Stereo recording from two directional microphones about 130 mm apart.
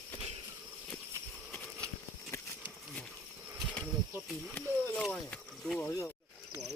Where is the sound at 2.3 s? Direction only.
20° left (ahead or behind).